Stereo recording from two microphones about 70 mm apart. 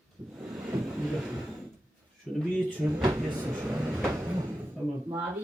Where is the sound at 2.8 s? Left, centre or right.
Right.